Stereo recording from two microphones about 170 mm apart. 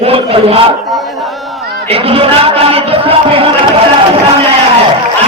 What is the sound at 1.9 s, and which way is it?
A man's voice, 35° right (ahead or behind).